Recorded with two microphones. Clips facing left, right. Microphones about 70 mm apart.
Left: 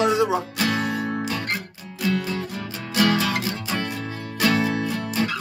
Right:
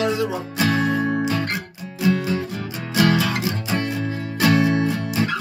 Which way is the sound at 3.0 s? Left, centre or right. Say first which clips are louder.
Right 2 dB; right.